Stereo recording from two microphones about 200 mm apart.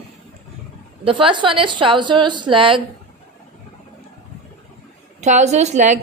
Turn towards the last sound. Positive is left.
turn(degrees=-35)  # may be behind; listen again after turning